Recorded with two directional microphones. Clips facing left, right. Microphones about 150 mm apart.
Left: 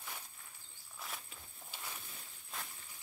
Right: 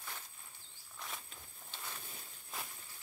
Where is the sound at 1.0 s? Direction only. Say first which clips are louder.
Even; 5° left (ahead or behind).